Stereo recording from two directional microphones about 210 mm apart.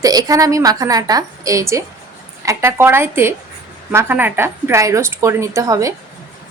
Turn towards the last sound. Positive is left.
turn(degrees=-15)  # may be behind; listen again after turning